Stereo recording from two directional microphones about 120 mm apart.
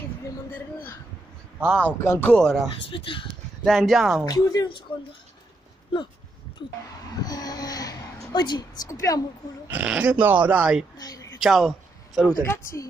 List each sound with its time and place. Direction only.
1.8 s speech: 20° left (ahead or behind)
2.7 s speech: 45° left (ahead or behind)
3.6 s speech: centre (ahead or behind)
4.3 s a woman's voice: 30° left (ahead or behind)
5.9 s a woman's voice: 45° left (ahead or behind); by 9.2 s 25° left (ahead or behind)
9.7 s speech: 15° right (ahead or behind)
11.0 s a sound: 30° left (ahead or behind)
11.4 s a man's voice: centre (ahead or behind)
12.4 s speech: 20° left (ahead or behind)